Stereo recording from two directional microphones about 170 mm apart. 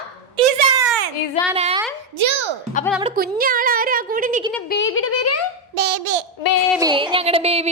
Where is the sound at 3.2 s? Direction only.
60° right (ahead or behind).